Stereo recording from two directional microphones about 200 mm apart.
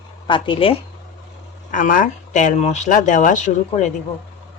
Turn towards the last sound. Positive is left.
turn(degrees=35)  # may be behind; listen again after turning